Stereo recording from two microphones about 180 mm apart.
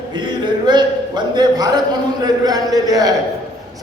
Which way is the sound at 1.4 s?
20° right (ahead or behind).